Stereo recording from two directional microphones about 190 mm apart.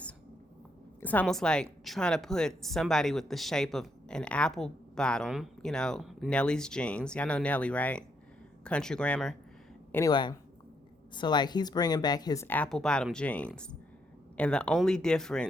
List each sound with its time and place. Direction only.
1.0 s a woman's voice: 5° left (ahead or behind)
9.9 s a woman's voice: 20° left (ahead or behind); by 15.4 s 5° left (ahead or behind)